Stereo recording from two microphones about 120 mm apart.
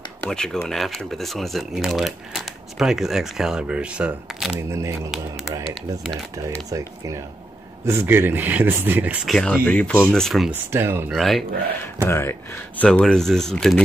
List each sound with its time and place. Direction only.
0.2 s speech: 5° left (ahead or behind)
4.6 s speech: 25° right (ahead or behind)
6.7 s speech: 25° right (ahead or behind)
9.2 s speech: 5° left (ahead or behind)
10.5 s speech: 20° right (ahead or behind)
11.1 s speech: centre (ahead or behind)
12.0 s speech: 20° left (ahead or behind); by 13.8 s 5° left (ahead or behind)